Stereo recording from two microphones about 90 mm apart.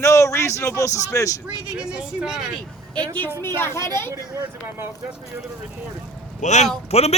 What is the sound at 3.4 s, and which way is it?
Speech, 25° left (ahead or behind).